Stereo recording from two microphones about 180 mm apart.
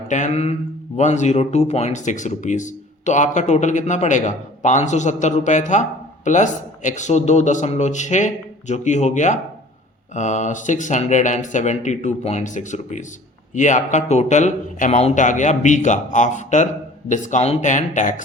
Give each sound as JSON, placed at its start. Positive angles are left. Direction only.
{"t": 0.1, "sound": "speech", "side_deg": 40}